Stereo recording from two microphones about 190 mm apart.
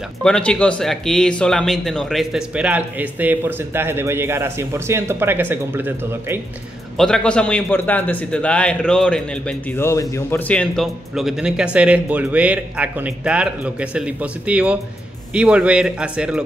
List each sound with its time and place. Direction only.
0.2 s speech: 5° left (ahead or behind); by 6.4 s 10° right (ahead or behind)
7.0 s a man's voice: 5° left (ahead or behind)